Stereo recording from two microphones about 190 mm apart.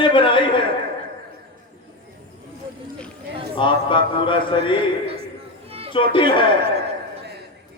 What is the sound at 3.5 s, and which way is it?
Mantra, 25° left (ahead or behind).